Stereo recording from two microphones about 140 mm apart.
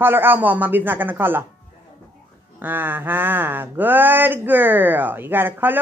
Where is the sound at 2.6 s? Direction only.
15° right (ahead or behind).